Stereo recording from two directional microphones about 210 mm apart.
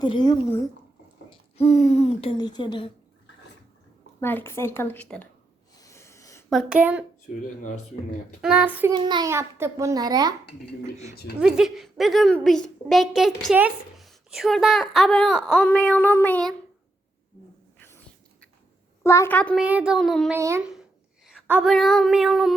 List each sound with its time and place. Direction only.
0.0 s speech: 20° left (ahead or behind)
4.2 s a woman's voice: 10° left (ahead or behind)
5.7 s a sound: 15° left (ahead or behind)
6.5 s a woman's voice: 5° right (ahead or behind)
8.4 s a child's voice: 5° right (ahead or behind)
8.9 s a child's voice: 20° right (ahead or behind)
11.3 s a woman's voice: 5° right (ahead or behind)
17.7 s whispering: 10° left (ahead or behind)
19.0 s a woman's voice: 15° left (ahead or behind)
19.5 s a woman's voice: 5° right (ahead or behind)
20.4 s a child's voice: 15° right (ahead or behind)